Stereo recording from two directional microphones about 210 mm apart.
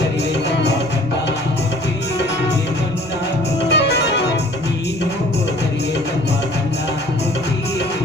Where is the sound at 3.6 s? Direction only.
55° left (ahead or behind).